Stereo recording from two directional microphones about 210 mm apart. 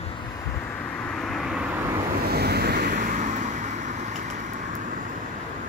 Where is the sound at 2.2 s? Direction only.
50° right (ahead or behind).